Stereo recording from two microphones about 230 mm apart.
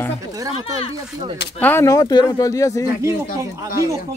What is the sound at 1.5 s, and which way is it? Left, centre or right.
Speech, centre.